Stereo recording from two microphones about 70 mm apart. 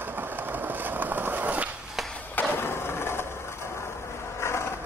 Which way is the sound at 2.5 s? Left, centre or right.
Left.